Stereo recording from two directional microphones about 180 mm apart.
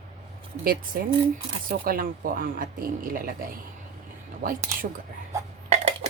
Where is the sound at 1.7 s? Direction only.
55° right (ahead or behind).